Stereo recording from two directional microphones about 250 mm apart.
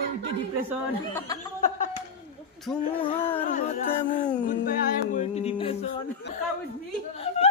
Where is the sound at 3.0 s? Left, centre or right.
Left.